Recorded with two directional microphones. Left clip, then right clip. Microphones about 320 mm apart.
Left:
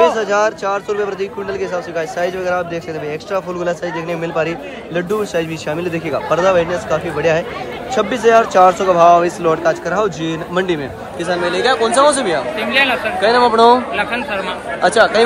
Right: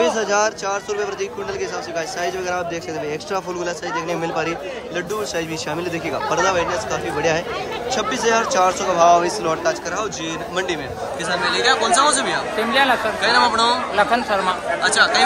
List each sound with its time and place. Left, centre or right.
0.0 s speech: centre
12.5 s speech: centre
13.9 s speech: centre
14.8 s speech: centre